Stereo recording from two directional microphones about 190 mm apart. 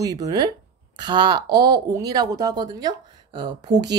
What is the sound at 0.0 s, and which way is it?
Speech, 20° right (ahead or behind).